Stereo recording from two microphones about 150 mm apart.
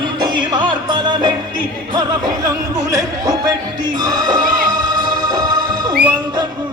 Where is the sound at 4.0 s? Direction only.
25° right (ahead or behind).